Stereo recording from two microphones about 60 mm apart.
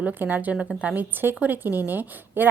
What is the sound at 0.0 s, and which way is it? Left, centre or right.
A woman's voice, right.